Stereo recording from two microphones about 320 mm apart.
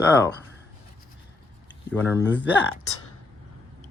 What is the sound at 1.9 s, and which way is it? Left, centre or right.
Speech, centre.